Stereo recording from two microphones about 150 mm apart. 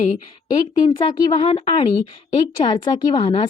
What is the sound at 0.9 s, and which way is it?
A woman's voice, 30° left (ahead or behind).